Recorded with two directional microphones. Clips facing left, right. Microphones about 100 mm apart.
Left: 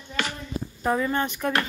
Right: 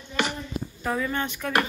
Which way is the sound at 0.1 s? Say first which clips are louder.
Right 3 dB; 15° right (ahead or behind).